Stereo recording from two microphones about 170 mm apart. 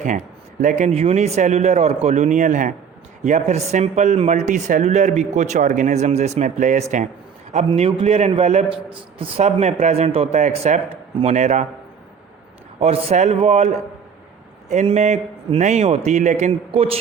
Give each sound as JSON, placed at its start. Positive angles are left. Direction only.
{"t": 0.6, "sound": "speech", "side_deg": -50}
{"t": 0.9, "sound": "a man's voice", "side_deg": -35}
{"t": 7.7, "sound": "a man's voice", "side_deg": -30}
{"t": 12.8, "sound": "a man's voice", "side_deg": -40}